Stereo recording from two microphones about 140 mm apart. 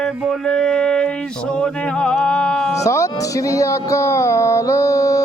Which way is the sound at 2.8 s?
20° left (ahead or behind).